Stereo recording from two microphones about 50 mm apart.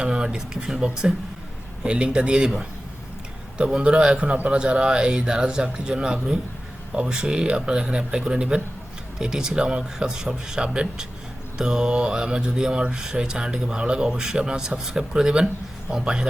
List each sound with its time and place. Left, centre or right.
0.0 s mantra: centre
3.7 s a man's voice: centre
4.4 s mantra: right